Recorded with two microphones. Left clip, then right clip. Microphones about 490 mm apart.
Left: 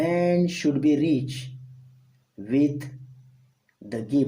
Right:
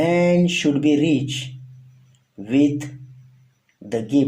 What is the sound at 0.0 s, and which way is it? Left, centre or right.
Speech, left.